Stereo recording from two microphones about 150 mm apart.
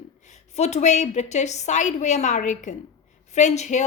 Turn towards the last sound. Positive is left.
turn(degrees=50)  # may be behind; listen again after turning